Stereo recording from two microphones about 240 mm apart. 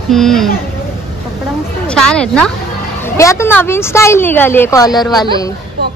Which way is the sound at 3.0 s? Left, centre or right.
Centre.